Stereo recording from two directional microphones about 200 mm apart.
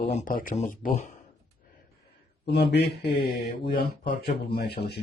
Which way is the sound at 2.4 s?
55° left (ahead or behind).